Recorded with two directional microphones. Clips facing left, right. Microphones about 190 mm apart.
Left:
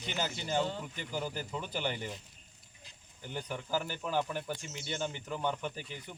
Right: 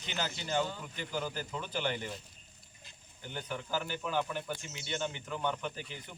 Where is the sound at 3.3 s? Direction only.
10° left (ahead or behind).